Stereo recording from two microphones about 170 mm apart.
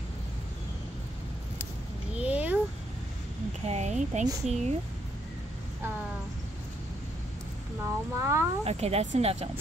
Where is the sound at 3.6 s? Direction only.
40° right (ahead or behind).